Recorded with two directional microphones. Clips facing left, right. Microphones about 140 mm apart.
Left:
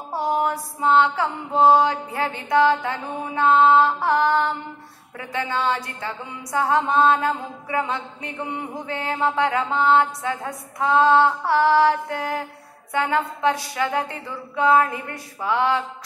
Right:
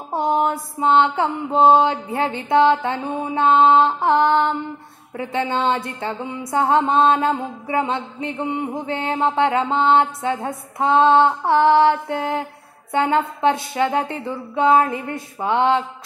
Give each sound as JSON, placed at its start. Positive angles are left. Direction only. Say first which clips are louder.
{"t": 0.1, "sound": "a woman's voice", "louder": "right 3 dB", "side_deg": -25}